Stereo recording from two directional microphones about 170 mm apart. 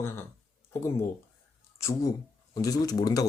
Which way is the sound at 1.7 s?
15° left (ahead or behind).